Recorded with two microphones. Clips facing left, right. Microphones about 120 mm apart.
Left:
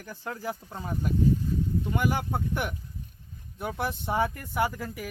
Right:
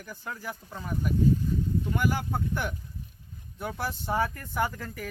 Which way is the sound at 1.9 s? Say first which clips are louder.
Left 1 dB; 20° left (ahead or behind).